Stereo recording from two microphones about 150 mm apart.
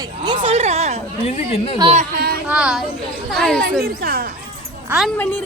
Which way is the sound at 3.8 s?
85° right.